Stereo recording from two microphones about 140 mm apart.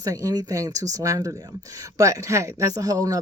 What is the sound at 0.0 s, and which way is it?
Speech, 25° right (ahead or behind).